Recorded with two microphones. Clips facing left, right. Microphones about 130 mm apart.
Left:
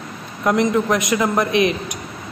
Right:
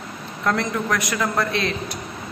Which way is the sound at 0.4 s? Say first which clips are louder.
Left 6 dB; 20° left (ahead or behind).